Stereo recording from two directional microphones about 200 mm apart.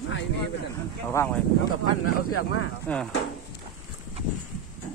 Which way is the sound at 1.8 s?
90° left.